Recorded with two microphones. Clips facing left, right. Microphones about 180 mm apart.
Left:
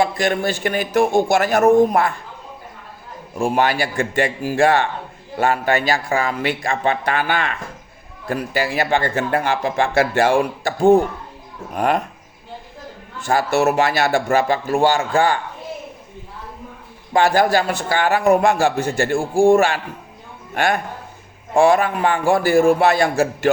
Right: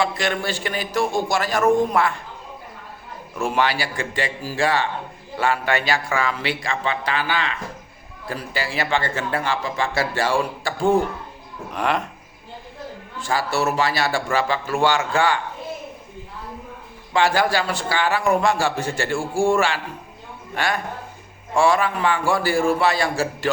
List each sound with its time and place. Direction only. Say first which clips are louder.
0.0 s speech: left 4 dB; 45° left (ahead or behind)
3.5 s speech: left 3 dB; 45° left (ahead or behind)
5.4 s speech: left 4 dB; 40° left (ahead or behind)
10.8 s speech: left 6 dB; 40° left (ahead or behind)
13.2 s speech: left 5 dB; 50° left (ahead or behind)
17.1 s speech: left 4 dB; 40° left (ahead or behind)